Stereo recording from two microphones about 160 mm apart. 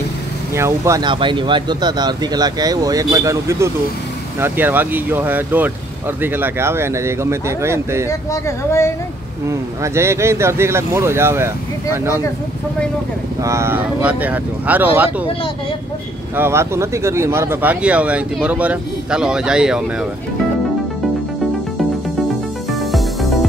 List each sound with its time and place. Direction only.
0.6 s speech: 20° right (ahead or behind)
1.0 s speech: 30° right (ahead or behind)
8.1 s speech: 20° left (ahead or behind)
9.5 s speech: 15° right (ahead or behind)
13.4 s speech: 15° right (ahead or behind)
16.3 s speech: 15° right (ahead or behind)
22.7 s music: centre (ahead or behind)